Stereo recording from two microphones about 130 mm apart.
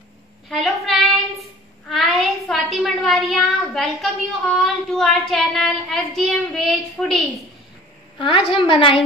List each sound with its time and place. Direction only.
0.5 s a sound: centre (ahead or behind)
1.9 s a woman's voice: centre (ahead or behind)
8.2 s a woman's voice: 45° left (ahead or behind)